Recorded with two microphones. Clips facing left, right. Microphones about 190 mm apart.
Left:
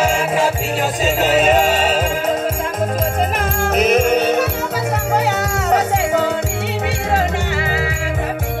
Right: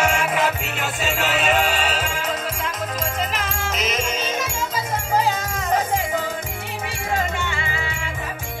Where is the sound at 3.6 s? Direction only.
60° left (ahead or behind).